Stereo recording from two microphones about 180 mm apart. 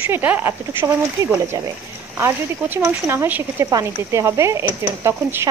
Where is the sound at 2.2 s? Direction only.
15° right (ahead or behind).